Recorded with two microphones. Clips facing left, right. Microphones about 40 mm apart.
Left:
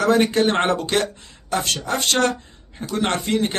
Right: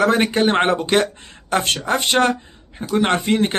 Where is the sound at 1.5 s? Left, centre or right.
Right.